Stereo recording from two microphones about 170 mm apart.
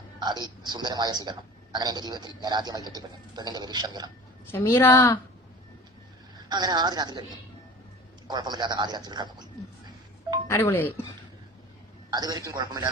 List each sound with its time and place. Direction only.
0.2 s a man's voice: 25° right (ahead or behind)
4.5 s a woman's voice: 15° left (ahead or behind)
6.5 s a man's voice: 25° right (ahead or behind)
8.3 s speech: 25° right (ahead or behind)
10.5 s a woman's voice: 15° left (ahead or behind)
12.1 s a man's voice: 25° right (ahead or behind)